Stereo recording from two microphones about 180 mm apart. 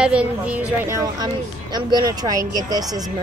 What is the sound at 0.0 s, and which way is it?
A woman's voice, 5° right (ahead or behind).